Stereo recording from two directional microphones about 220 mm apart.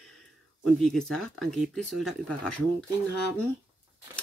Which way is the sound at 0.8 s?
Centre (ahead or behind).